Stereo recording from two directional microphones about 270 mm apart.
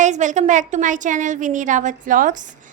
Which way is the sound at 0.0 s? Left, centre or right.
Right.